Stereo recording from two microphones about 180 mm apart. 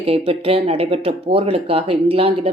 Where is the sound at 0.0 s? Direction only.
35° right (ahead or behind).